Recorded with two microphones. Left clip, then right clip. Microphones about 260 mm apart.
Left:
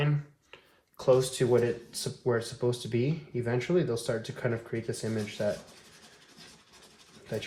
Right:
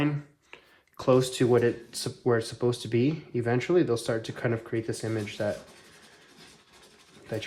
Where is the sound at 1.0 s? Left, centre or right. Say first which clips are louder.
Right 1 dB; right.